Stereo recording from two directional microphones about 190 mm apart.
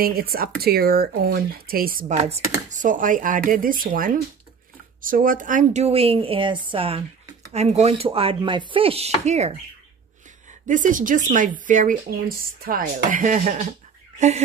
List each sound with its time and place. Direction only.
0.0 s speech: 50° right (ahead or behind)
2.2 s a woman's voice: 35° right (ahead or behind)
10.7 s speech: 45° right (ahead or behind)